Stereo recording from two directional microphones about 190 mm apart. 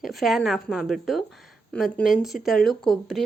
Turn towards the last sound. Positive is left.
turn(degrees=0)  # may be behind; listen again after turning